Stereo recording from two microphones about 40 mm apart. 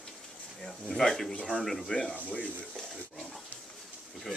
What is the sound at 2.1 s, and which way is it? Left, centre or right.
Speech, left.